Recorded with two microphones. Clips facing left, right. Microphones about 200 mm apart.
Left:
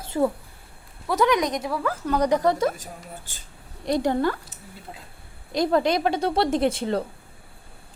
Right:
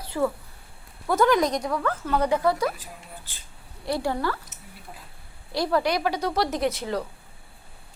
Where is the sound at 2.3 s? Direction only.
20° left (ahead or behind).